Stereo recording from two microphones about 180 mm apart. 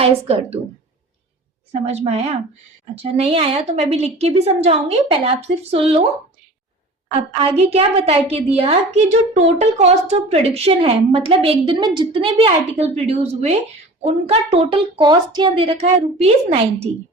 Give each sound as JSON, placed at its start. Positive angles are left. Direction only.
{"t": 0.0, "sound": "a child's voice", "side_deg": -35}
{"t": 1.7, "sound": "a child's voice", "side_deg": -35}
{"t": 7.1, "sound": "a child's voice", "side_deg": -35}